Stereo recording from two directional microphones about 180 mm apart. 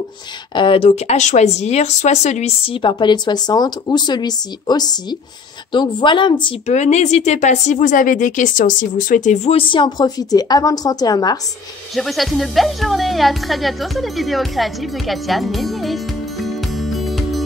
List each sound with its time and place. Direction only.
0.6 s speech: 30° left (ahead or behind)
6.7 s a woman's voice: 40° left (ahead or behind); by 11.3 s 20° left (ahead or behind)
11.9 s speech: centre (ahead or behind)